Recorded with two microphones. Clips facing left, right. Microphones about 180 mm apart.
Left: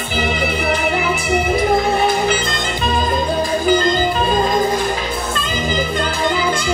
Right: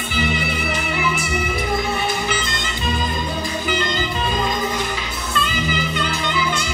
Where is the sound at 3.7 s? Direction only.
45° left (ahead or behind).